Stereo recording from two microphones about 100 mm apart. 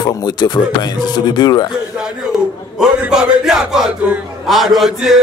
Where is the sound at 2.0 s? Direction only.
5° right (ahead or behind).